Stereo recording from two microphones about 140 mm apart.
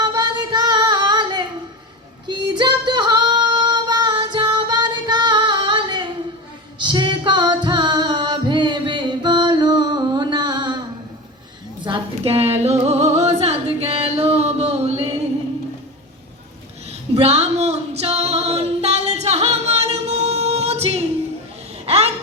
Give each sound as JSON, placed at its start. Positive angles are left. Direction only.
{"t": 0.0, "sound": "singing", "side_deg": -30}
{"t": 2.2, "sound": "female singing", "side_deg": -35}
{"t": 7.6, "sound": "music", "side_deg": -30}
{"t": 11.9, "sound": "music", "side_deg": -45}
{"t": 17.2, "sound": "female singing", "side_deg": -50}
{"t": 21.8, "sound": "a sound", "side_deg": -50}